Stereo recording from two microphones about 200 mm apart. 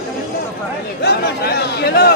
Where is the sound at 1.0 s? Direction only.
55° left (ahead or behind).